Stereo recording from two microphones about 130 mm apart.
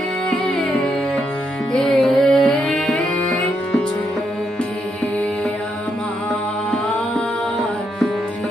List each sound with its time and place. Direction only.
1.7 s music: 5° left (ahead or behind)